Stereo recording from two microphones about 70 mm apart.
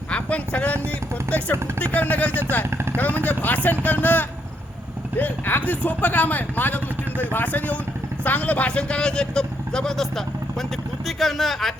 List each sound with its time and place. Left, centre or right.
0.1 s a sound: centre
1.8 s speech: left
2.6 s vehicle: right
3.2 s a man's voice: left; by 11.7 s centre